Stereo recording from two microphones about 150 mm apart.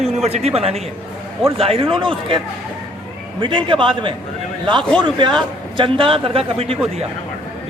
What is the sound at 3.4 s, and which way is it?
Speech, 35° right (ahead or behind).